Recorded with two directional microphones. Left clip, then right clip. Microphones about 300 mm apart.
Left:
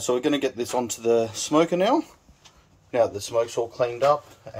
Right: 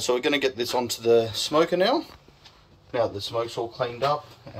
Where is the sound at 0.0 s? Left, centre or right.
Left.